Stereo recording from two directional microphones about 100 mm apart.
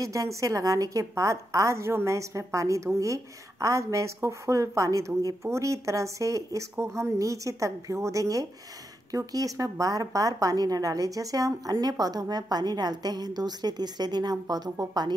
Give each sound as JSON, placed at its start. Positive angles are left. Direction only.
{"t": 0.0, "sound": "a woman's voice", "side_deg": -30}